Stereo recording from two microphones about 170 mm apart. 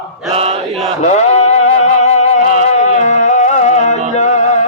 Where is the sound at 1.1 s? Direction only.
40° left (ahead or behind).